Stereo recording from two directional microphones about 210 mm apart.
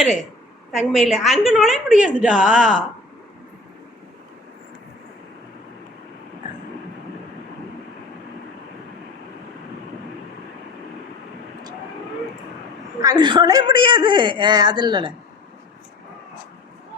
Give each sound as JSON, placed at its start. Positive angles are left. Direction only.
{"t": 0.7, "sound": "a woman's voice", "side_deg": 0}
{"t": 13.0, "sound": "a woman's voice", "side_deg": -20}